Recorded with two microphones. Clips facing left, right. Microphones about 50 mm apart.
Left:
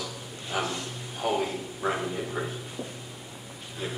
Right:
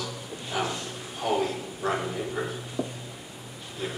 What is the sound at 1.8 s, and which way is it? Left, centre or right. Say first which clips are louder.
Speech: right 1 dB; centre.